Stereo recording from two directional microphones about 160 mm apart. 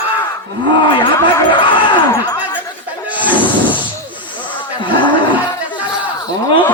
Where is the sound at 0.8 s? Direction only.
30° left (ahead or behind).